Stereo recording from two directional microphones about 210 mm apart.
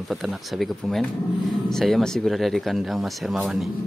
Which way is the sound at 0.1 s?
Centre (ahead or behind).